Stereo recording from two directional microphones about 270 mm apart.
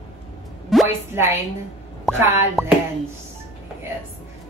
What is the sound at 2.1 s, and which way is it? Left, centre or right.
Speech, centre.